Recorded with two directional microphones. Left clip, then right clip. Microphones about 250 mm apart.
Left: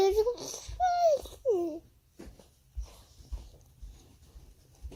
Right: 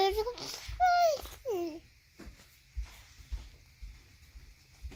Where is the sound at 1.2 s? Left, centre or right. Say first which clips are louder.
Left 6 dB; right.